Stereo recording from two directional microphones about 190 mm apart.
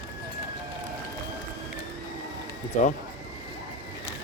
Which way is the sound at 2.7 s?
40° left (ahead or behind).